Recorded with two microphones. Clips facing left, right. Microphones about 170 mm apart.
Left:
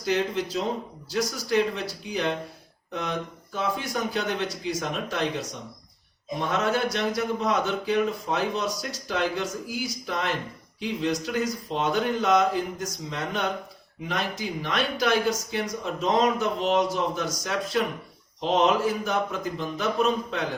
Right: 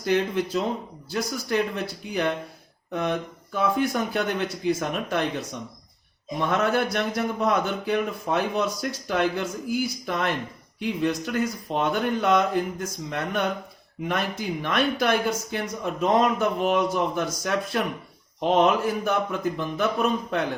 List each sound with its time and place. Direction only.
0.0 s a man's voice: 55° right (ahead or behind)
6.5 s a man's voice: 60° right (ahead or behind)